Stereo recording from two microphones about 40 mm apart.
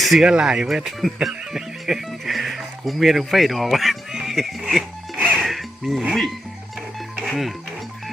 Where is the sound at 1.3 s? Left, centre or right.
Centre.